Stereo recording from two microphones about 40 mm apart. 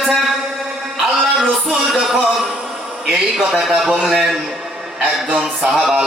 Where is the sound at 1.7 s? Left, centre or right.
Centre.